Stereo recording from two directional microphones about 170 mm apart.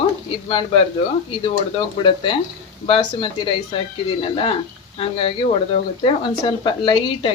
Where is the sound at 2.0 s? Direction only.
30° left (ahead or behind).